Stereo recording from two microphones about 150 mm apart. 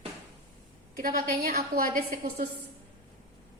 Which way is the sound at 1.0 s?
70° right (ahead or behind).